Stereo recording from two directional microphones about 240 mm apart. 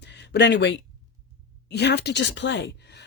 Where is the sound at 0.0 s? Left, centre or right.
Left.